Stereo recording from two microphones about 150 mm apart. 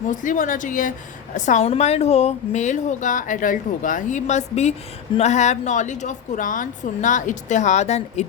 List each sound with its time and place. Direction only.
0.1 s a woman's voice: 60° left (ahead or behind)